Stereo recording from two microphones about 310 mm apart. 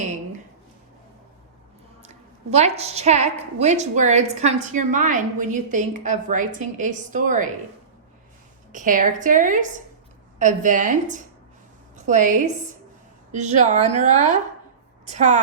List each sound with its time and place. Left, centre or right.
2.0 s a woman's voice: right
8.7 s a woman's voice: right